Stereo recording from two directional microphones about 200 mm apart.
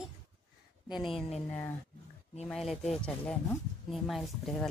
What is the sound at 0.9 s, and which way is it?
Speech, 25° left (ahead or behind).